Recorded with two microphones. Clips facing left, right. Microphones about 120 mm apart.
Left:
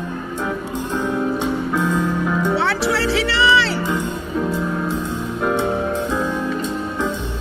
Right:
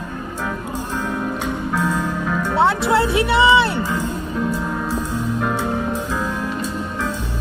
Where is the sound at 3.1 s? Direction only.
85° left.